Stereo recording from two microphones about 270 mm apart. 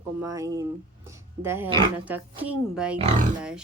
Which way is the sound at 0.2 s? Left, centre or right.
Centre.